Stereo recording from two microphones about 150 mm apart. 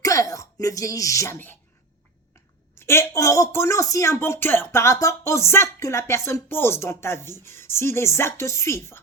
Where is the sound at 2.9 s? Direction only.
20° left (ahead or behind).